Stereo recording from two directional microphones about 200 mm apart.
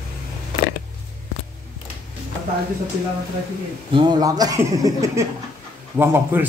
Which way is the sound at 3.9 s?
25° right (ahead or behind).